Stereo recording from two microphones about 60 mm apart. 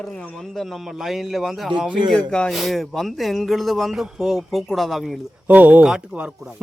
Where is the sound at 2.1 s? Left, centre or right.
Centre.